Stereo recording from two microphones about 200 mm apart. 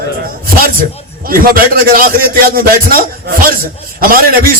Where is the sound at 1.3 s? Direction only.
45° right (ahead or behind).